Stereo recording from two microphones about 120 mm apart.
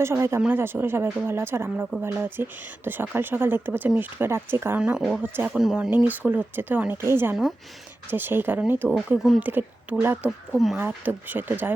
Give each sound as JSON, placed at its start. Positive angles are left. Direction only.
{"t": 0.0, "sound": "speech", "side_deg": -20}
{"t": 4.8, "sound": "speech", "side_deg": -5}
{"t": 10.2, "sound": "speech", "side_deg": 0}
{"t": 10.8, "sound": "speech", "side_deg": -15}